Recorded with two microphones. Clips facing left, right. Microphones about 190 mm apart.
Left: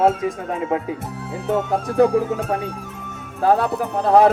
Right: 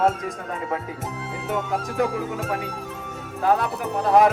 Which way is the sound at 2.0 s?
35° left (ahead or behind).